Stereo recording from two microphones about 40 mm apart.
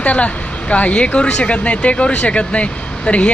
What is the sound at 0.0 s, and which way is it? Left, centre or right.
Speech, left.